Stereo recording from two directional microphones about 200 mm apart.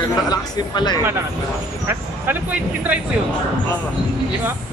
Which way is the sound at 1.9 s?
10° right (ahead or behind).